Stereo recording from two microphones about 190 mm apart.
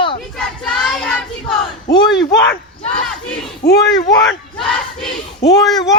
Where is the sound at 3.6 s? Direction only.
55° left (ahead or behind).